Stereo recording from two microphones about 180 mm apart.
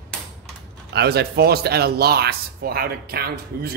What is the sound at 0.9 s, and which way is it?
Speech, 65° right (ahead or behind).